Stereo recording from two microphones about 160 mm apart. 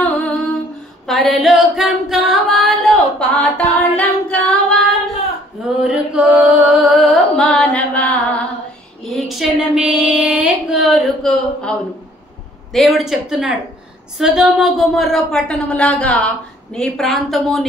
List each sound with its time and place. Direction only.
1.0 s singing: centre (ahead or behind)
5.7 s a sound: centre (ahead or behind)
9.1 s child singing: centre (ahead or behind)
12.7 s speech: centre (ahead or behind)